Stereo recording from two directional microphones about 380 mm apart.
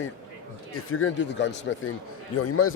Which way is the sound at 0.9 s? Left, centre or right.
Left.